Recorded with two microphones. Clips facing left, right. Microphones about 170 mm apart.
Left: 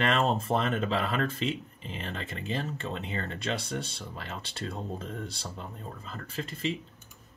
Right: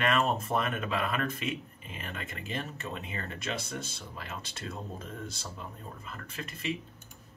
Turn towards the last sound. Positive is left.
turn(degrees=30)  # may be behind; listen again after turning